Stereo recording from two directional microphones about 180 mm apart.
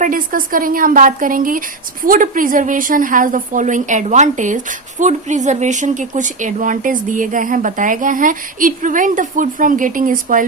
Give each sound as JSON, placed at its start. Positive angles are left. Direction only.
{"t": 0.0, "sound": "a woman's voice", "side_deg": -50}